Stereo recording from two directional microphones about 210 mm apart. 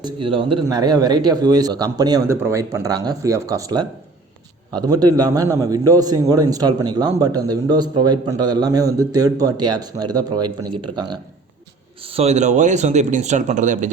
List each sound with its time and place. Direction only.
0.0 s a man's voice: 25° right (ahead or behind)
12.1 s speech: 30° right (ahead or behind)